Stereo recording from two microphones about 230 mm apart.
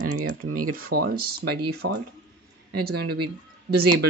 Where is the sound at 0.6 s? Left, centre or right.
Right.